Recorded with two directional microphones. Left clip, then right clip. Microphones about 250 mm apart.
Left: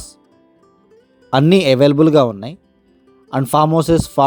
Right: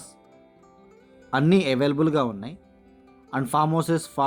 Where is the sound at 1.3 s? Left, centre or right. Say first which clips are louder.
Left 9 dB; left.